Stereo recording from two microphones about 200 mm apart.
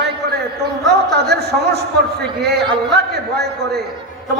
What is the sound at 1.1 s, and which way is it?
Speech, 55° right (ahead or behind).